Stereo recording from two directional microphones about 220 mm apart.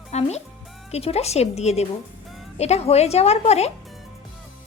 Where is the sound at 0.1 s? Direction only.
30° left (ahead or behind).